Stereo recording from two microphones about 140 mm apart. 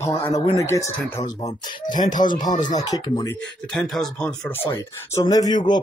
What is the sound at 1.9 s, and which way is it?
Speech, 70° left (ahead or behind).